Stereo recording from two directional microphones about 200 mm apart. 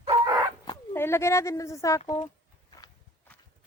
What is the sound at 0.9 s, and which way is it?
A child's voice, 10° left (ahead or behind).